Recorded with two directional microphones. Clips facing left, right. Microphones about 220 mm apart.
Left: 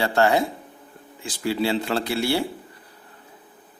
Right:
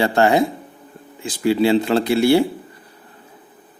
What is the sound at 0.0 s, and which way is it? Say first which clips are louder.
Speech: right 4 dB; 20° right (ahead or behind).